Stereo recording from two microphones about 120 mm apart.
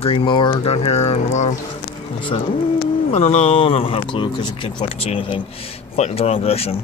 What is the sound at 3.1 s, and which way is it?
Speech, 65° left (ahead or behind).